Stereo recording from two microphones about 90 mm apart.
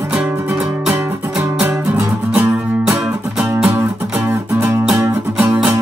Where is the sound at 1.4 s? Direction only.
20° right (ahead or behind).